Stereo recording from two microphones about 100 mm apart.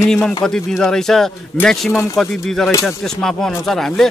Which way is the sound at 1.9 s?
30° left (ahead or behind).